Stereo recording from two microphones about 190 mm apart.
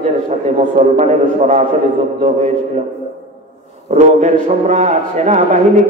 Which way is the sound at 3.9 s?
35° right (ahead or behind).